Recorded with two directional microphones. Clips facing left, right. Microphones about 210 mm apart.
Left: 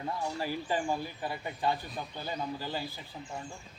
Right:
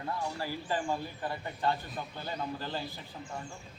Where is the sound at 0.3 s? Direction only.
15° left (ahead or behind).